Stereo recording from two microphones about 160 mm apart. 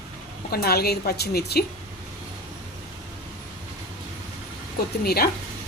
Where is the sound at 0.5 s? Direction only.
75° left (ahead or behind).